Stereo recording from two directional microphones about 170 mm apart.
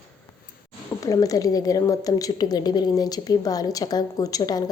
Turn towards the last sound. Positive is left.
turn(degrees=20)  # may be behind; listen again after turning